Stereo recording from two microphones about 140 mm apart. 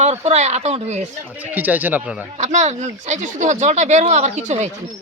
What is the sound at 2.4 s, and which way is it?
Speech, 55° right (ahead or behind).